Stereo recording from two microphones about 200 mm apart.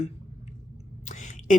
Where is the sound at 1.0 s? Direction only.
40° left (ahead or behind).